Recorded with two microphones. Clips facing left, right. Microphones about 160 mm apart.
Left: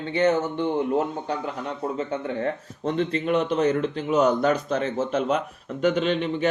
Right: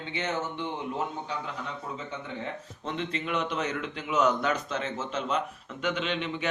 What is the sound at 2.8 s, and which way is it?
Speech, 40° left (ahead or behind).